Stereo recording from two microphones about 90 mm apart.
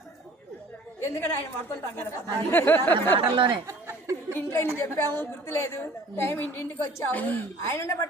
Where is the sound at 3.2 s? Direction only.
65° right (ahead or behind).